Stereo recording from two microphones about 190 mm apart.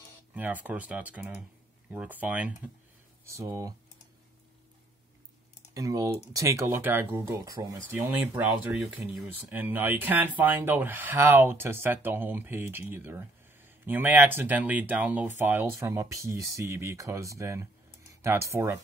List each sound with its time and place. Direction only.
0.3 s speech: 10° right (ahead or behind)
5.8 s speech: 15° right (ahead or behind)